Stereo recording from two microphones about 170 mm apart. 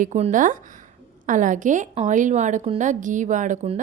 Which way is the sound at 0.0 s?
45° right (ahead or behind).